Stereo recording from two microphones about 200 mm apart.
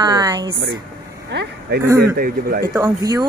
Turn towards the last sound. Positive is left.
turn(degrees=-20)  # may be behind; listen again after turning